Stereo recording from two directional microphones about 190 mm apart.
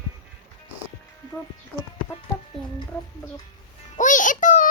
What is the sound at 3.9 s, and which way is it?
Music, 40° left (ahead or behind).